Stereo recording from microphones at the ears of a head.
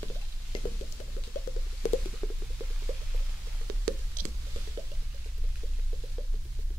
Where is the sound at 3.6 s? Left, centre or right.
Right.